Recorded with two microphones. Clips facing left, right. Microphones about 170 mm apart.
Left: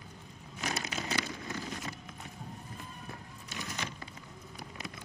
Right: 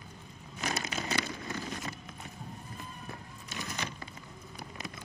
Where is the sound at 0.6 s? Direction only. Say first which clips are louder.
Right 1 dB; 45° right (ahead or behind).